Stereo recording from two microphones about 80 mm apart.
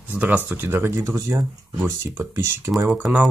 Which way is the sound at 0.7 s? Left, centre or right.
Right.